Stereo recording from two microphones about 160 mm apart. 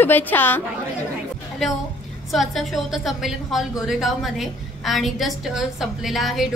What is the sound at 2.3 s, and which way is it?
A woman's voice, centre (ahead or behind).